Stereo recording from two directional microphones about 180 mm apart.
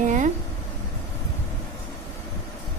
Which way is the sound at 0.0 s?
45° right (ahead or behind).